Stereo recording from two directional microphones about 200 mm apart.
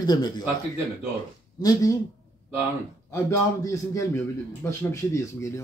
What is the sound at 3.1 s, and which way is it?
Speech, 15° left (ahead or behind).